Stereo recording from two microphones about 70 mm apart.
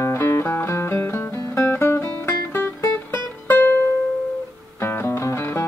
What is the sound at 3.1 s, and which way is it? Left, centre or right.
Music, left.